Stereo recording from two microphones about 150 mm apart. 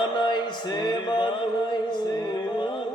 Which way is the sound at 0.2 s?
30° left (ahead or behind).